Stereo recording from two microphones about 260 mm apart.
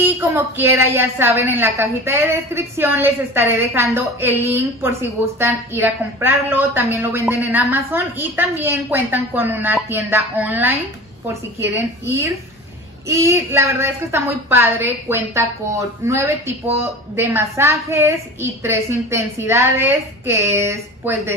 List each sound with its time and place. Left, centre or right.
0.2 s a woman's voice: centre
13.1 s a woman's voice: centre